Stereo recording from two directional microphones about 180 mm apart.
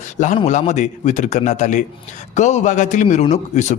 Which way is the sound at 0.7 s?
40° left (ahead or behind).